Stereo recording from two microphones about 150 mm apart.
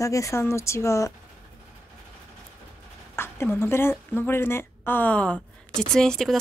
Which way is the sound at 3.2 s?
15° left (ahead or behind).